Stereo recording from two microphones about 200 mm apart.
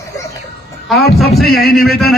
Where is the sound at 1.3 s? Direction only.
50° left (ahead or behind).